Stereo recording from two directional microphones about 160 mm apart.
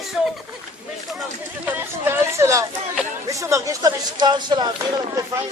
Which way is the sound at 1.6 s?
15° right (ahead or behind).